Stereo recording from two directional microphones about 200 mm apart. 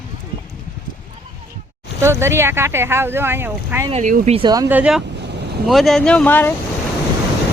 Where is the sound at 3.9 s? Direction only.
40° right (ahead or behind).